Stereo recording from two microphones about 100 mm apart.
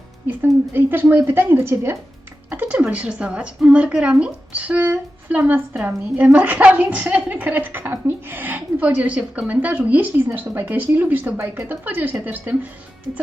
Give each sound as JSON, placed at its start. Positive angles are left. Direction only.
{"t": 0.3, "sound": "a woman's voice", "side_deg": -20}